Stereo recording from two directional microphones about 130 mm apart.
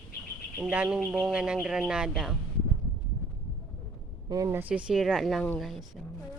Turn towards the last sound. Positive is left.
turn(degrees=0)  # may be behind; listen again after turning